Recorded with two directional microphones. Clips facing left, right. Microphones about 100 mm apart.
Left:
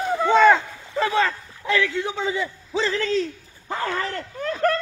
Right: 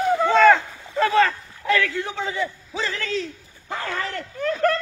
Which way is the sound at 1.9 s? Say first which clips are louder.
Left 2 dB; 20° left (ahead or behind).